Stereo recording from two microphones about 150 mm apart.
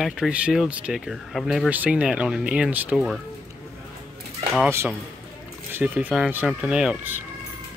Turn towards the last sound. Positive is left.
turn(degrees=-10)  # may be behind; listen again after turning